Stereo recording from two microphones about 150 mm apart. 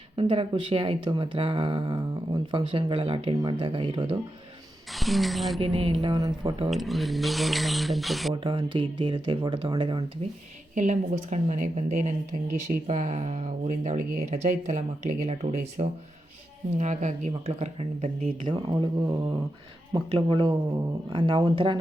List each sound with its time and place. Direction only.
0.2 s speech: 35° right (ahead or behind)
4.9 s speech: centre (ahead or behind)
5.5 s speech: 40° right (ahead or behind)
6.0 s speech: 25° right (ahead or behind)
6.7 s speech: centre (ahead or behind)
8.3 s speech: 35° right (ahead or behind)
10.8 s speech: 50° right (ahead or behind)
18.4 s speech: 30° right (ahead or behind)